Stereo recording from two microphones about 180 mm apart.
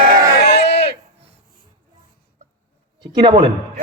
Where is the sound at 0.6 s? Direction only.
70° left (ahead or behind).